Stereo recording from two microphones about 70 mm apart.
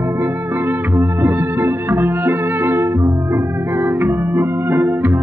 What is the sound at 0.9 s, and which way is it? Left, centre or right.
Music, right.